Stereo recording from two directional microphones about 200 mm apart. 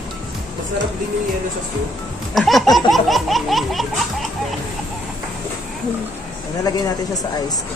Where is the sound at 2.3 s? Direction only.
Centre (ahead or behind).